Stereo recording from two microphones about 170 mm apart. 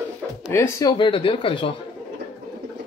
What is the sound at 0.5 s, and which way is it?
Speech, 20° left (ahead or behind).